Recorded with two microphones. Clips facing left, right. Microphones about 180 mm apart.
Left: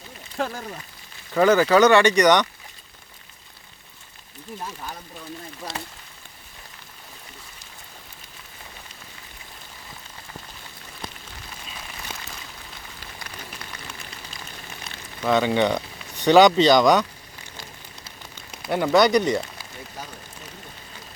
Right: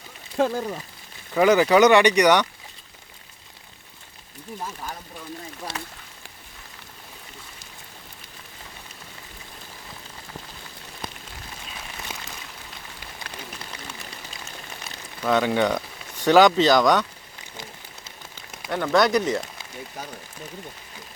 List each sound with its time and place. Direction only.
0.3 s speech: 20° right (ahead or behind)
12.1 s a sound: 10° right (ahead or behind)
15.3 s speech: 5° right (ahead or behind)
18.7 s speech: 10° left (ahead or behind)